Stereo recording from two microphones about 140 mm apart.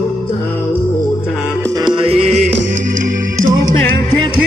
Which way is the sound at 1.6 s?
25° right (ahead or behind).